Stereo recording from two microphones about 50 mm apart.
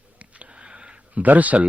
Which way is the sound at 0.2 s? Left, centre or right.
Right.